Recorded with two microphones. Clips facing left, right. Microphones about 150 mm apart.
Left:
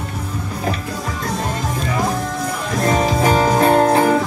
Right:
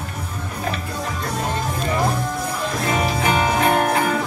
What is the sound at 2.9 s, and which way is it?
Music, 40° left (ahead or behind).